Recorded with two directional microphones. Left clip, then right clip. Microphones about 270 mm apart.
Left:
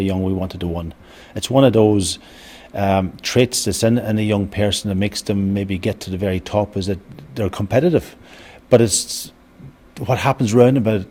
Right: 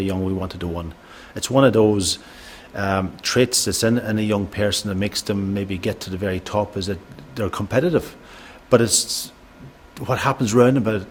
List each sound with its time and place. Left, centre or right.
0.0 s speech: left